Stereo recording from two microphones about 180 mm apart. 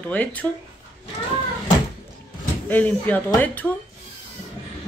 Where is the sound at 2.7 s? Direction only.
10° left (ahead or behind).